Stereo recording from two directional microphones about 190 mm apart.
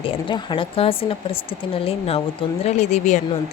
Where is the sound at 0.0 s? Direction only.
25° left (ahead or behind).